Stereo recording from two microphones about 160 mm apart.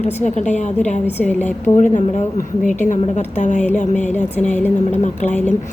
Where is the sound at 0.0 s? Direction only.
45° left (ahead or behind).